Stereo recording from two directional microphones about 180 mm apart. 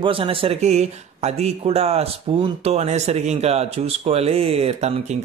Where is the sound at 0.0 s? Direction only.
30° right (ahead or behind).